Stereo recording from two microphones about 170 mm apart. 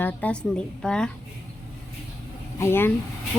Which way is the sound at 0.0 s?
10° left (ahead or behind).